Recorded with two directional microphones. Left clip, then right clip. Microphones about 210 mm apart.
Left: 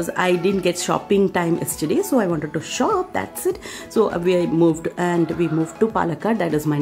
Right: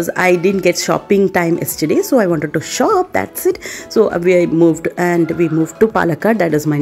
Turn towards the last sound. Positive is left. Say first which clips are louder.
# right 7 dB
turn(degrees=-15)  # may be behind; listen again after turning